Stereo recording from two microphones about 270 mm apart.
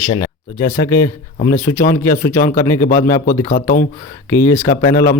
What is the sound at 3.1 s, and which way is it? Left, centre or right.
Speech, left.